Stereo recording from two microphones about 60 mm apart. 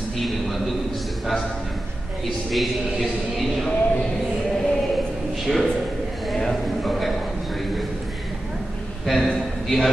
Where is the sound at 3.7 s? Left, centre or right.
Left.